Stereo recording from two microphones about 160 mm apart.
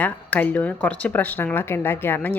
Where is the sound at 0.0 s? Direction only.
10° left (ahead or behind).